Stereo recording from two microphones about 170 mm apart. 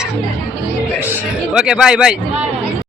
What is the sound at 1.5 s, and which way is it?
Speech, 5° right (ahead or behind).